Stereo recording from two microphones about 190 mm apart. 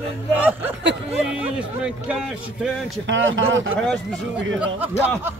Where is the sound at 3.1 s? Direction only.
85° right.